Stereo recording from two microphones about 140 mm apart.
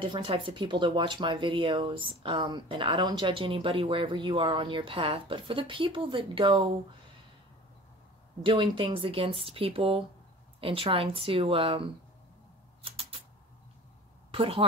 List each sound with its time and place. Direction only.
0.0 s speech: 35° right (ahead or behind)
8.4 s speech: 35° right (ahead or behind)
12.8 s a sound: 40° right (ahead or behind)
14.3 s a woman's voice: 40° right (ahead or behind)